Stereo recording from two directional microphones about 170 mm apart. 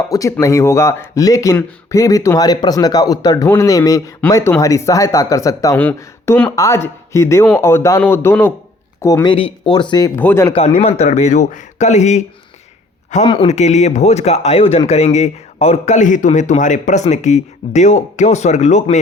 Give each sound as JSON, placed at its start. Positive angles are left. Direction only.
{"t": 0.1, "sound": "speech", "side_deg": 20}
{"t": 9.2, "sound": "speech", "side_deg": 30}
{"t": 10.2, "sound": "speech", "side_deg": 15}
{"t": 10.5, "sound": "speech", "side_deg": 35}
{"t": 13.2, "sound": "speech", "side_deg": 30}